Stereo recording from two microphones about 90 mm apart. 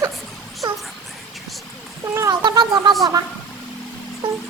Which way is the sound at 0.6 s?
50° right (ahead or behind).